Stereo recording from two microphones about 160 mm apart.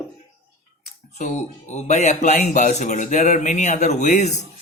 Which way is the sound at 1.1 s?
45° left (ahead or behind).